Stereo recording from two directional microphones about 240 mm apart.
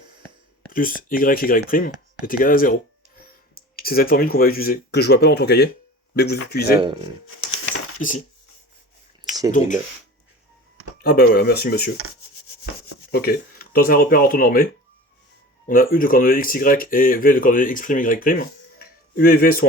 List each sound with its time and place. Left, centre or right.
0.7 s speech: left
6.8 s speech: centre
7.5 s coin: left
9.5 s speech: left
11.0 s speech: left
13.1 s speech: left